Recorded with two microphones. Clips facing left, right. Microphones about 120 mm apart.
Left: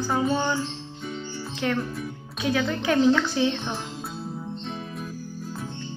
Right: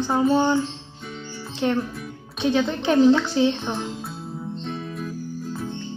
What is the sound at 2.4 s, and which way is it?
Speech, 25° right (ahead or behind).